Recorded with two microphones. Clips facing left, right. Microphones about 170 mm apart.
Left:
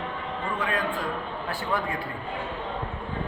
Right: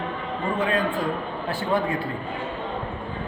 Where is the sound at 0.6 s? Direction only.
25° right (ahead or behind).